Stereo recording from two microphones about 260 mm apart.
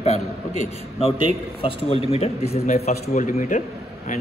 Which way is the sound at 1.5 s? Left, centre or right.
Left.